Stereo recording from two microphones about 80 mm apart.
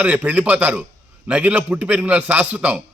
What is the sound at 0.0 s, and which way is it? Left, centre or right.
A man's voice, centre.